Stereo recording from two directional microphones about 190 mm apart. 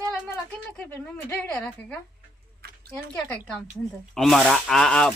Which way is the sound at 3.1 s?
5° left (ahead or behind).